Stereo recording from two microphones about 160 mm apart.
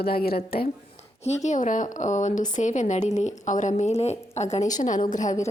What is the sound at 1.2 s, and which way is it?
Speech, 45° left (ahead or behind).